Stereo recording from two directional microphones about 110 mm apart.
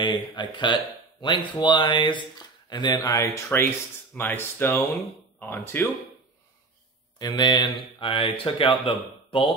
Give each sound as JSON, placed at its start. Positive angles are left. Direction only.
{"t": 0.4, "sound": "speech", "side_deg": 45}
{"t": 3.1, "sound": "speech", "side_deg": 20}
{"t": 7.2, "sound": "speech", "side_deg": 40}